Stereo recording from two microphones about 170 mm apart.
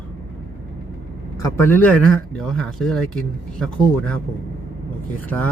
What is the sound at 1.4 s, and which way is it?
Speech, 15° left (ahead or behind).